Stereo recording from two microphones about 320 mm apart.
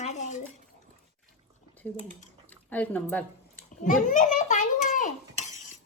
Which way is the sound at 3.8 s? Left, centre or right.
Left.